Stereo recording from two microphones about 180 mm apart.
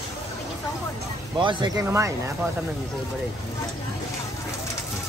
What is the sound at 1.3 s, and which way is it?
Speech, 25° right (ahead or behind).